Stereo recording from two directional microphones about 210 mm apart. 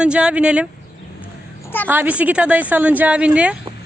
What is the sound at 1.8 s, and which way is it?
A woman's voice, 10° right (ahead or behind).